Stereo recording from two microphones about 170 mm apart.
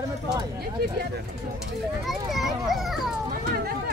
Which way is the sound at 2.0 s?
Centre (ahead or behind).